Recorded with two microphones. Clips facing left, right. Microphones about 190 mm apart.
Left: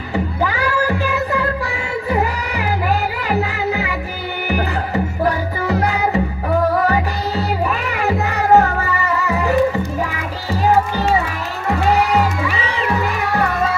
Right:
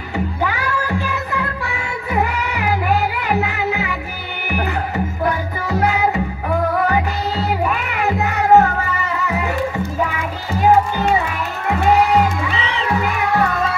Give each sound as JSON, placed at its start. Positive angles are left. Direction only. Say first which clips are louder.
{"t": 0.4, "sound": "a sound", "louder": "left 4 dB", "side_deg": 35}
{"t": 2.2, "sound": "music", "louder": "even", "side_deg": 35}
{"t": 7.6, "sound": "music", "louder": "even", "side_deg": 35}